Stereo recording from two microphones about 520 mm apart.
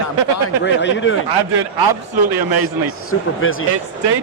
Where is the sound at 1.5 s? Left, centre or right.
Right.